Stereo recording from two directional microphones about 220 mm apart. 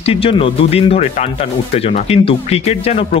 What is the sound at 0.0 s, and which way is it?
Speech, 25° left (ahead or behind).